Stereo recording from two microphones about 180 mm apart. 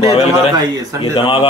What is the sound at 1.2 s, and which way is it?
Speech, 30° left (ahead or behind).